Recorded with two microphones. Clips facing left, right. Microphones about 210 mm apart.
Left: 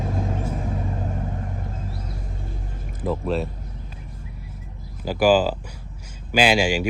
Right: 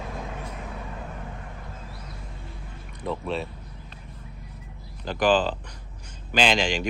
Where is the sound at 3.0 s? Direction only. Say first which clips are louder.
Left 5 dB; centre (ahead or behind).